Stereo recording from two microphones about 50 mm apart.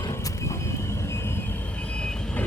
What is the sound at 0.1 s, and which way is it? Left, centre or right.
Vehicle, left.